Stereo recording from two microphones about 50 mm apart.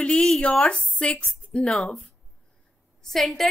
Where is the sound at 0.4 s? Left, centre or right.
Left.